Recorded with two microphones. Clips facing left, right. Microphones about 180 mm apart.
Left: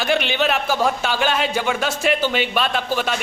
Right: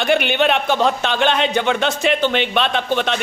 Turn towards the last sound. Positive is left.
turn(degrees=5)  # may be behind; listen again after turning